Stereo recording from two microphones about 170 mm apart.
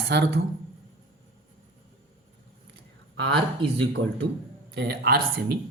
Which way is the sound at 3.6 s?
75° right (ahead or behind).